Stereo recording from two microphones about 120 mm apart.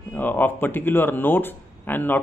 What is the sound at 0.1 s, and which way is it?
Speech, 15° left (ahead or behind).